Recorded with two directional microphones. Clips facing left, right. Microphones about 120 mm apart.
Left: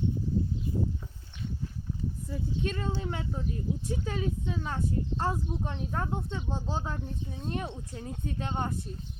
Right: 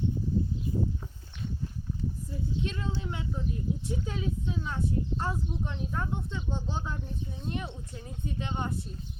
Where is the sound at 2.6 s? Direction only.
55° left (ahead or behind).